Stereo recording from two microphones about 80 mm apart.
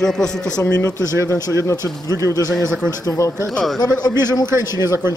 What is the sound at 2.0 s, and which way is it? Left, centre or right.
Speech, right.